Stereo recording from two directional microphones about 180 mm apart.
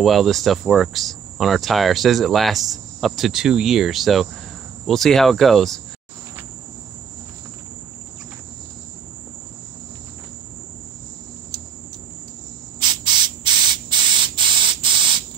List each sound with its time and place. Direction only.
0.0 s speech: centre (ahead or behind)
12.8 s spray: 25° right (ahead or behind)